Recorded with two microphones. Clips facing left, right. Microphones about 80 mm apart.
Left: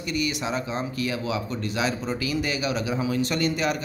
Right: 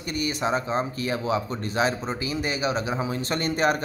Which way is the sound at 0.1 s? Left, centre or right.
Right.